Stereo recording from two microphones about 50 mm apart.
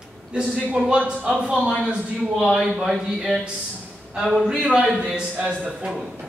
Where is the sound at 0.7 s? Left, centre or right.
Right; by 4.6 s centre.